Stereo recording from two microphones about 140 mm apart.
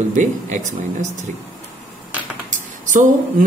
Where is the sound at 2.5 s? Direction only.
65° right (ahead or behind).